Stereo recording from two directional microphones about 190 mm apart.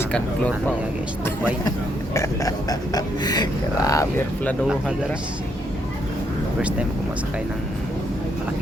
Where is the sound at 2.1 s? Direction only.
15° left (ahead or behind).